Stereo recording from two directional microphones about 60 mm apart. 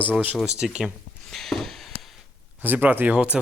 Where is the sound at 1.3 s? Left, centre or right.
Centre.